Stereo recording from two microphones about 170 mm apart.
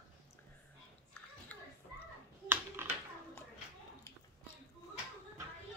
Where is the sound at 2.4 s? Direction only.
10° right (ahead or behind).